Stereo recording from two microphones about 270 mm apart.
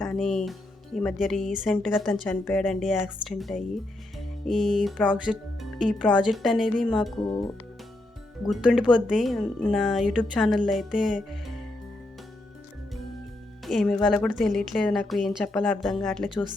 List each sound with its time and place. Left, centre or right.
0.0 s a woman's voice: centre
8.4 s a woman's voice: centre
13.7 s a woman's voice: centre